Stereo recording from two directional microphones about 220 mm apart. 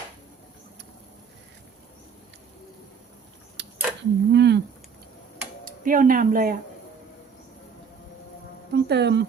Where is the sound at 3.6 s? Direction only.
50° right (ahead or behind).